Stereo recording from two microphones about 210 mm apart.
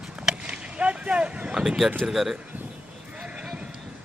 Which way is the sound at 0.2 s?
5° right (ahead or behind).